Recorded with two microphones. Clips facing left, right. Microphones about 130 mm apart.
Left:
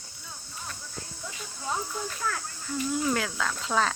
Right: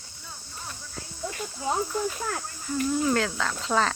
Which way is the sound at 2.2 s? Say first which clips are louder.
Right 1 dB; 40° right (ahead or behind).